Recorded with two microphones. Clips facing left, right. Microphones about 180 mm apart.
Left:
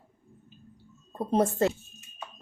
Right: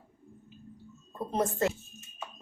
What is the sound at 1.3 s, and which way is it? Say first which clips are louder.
Speech: left 5 dB; 30° left (ahead or behind).